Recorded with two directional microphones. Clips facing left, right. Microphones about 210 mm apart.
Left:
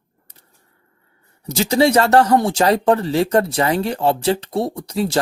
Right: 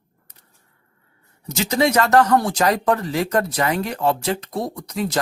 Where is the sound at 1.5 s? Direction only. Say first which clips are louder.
Left 4 dB; 30° left (ahead or behind).